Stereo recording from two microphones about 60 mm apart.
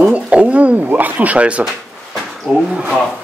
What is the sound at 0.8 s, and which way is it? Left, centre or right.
Speech, right.